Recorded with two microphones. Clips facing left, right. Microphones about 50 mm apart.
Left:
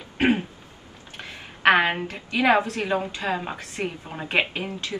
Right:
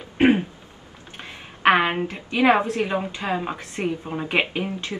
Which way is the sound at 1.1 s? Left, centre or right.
Right.